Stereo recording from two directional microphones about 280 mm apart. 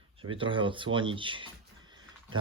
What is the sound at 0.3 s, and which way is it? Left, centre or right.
Speech, centre.